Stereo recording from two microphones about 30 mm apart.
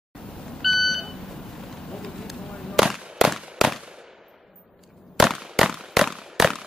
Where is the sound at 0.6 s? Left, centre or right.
Centre.